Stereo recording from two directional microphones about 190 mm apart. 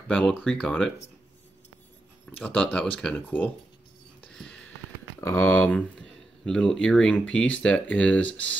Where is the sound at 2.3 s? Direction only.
5° left (ahead or behind).